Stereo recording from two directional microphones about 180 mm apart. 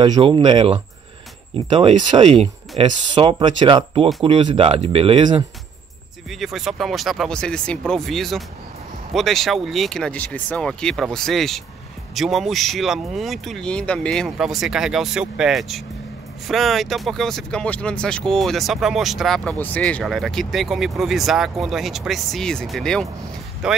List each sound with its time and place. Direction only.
0.0 s speech: 25° right (ahead or behind)
6.4 s speech: centre (ahead or behind)